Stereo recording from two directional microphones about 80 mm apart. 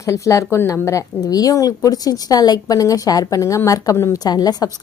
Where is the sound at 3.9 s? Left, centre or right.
Left.